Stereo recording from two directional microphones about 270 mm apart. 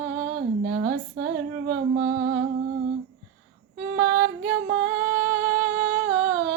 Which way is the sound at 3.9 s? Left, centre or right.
Right.